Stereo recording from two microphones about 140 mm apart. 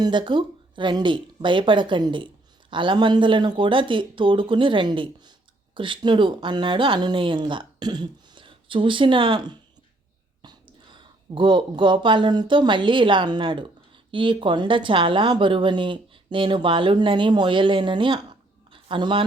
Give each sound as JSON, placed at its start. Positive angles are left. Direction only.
{"t": 0.0, "sound": "speech", "side_deg": -35}